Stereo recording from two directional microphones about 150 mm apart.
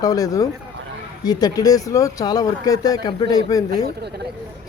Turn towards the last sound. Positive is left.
turn(degrees=25)  # may be behind; listen again after turning